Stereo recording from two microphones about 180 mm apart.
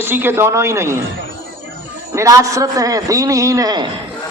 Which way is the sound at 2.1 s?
20° right (ahead or behind).